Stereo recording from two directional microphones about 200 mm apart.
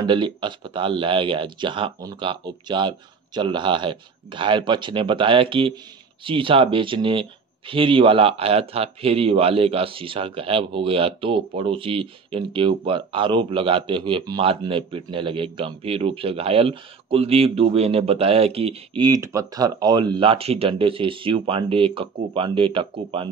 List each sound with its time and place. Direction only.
0.0 s speech: 25° right (ahead or behind)